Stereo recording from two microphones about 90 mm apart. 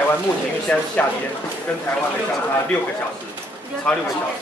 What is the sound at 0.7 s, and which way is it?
Speech, 15° left (ahead or behind).